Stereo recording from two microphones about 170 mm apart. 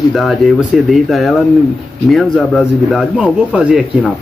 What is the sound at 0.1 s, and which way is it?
A man's voice, centre (ahead or behind).